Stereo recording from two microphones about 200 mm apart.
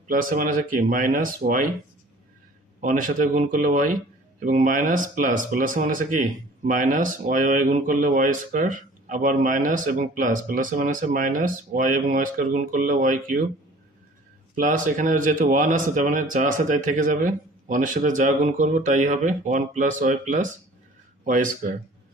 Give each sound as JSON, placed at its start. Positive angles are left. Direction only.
{"t": 0.1, "sound": "speech", "side_deg": -45}
{"t": 2.8, "sound": "speech", "side_deg": -40}
{"t": 14.6, "sound": "speech", "side_deg": -45}